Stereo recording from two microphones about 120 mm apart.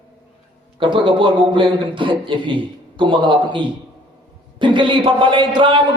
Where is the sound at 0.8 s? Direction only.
45° right (ahead or behind).